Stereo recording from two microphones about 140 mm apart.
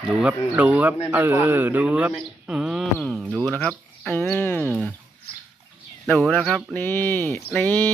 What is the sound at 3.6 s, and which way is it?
Speech, 10° left (ahead or behind).